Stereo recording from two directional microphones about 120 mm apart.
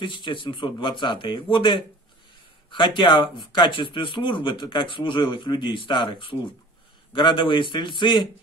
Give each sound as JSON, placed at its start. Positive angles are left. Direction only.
{"t": 0.0, "sound": "speech", "side_deg": 40}